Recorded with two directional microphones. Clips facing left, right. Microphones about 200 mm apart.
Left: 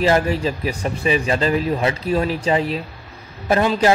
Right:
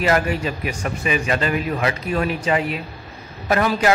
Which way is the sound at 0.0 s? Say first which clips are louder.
Left 2 dB; 30° left (ahead or behind).